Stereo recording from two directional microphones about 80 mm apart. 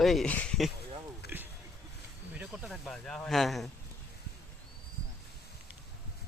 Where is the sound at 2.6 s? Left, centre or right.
Centre.